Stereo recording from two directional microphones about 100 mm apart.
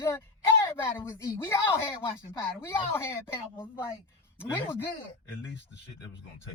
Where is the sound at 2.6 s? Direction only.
25° left (ahead or behind).